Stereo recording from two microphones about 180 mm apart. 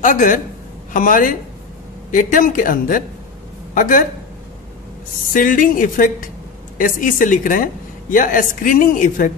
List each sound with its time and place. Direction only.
0.0 s a woman's voice: 45° left (ahead or behind)
5.3 s a woman's voice: 50° left (ahead or behind)